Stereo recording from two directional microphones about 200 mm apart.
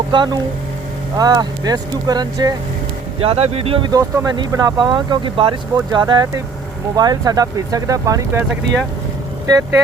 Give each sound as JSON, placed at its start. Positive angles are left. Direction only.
{"t": 0.1, "sound": "speech", "side_deg": -20}
{"t": 3.2, "sound": "speech", "side_deg": -30}